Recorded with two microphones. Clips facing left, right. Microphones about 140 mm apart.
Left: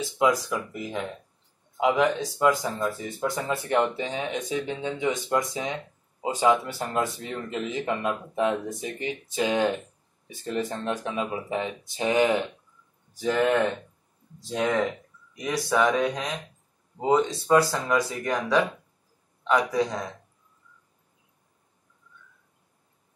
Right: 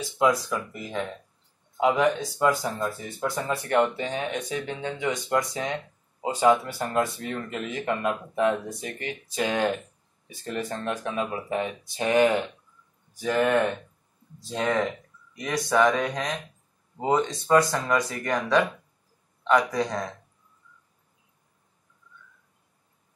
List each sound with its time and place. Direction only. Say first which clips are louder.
0.5 s speech: left 1 dB; 15° left (ahead or behind)
14.5 s speech: left 1 dB; 15° left (ahead or behind)
19.7 s speech: left 2 dB; 5° left (ahead or behind)